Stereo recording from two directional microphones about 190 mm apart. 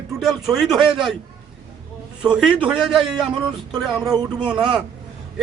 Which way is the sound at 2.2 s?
5° right (ahead or behind).